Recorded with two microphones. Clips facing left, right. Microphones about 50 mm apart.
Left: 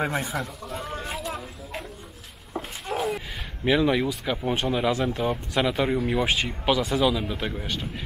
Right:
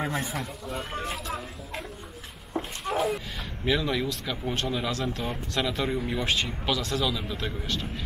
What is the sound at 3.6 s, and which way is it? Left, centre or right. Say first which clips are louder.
Speech: left 5 dB; left.